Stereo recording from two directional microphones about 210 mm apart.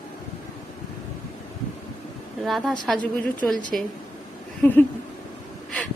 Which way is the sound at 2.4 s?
Centre (ahead or behind).